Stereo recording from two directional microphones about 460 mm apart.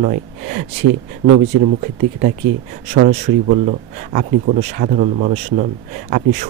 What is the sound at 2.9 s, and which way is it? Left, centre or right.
Speech, centre.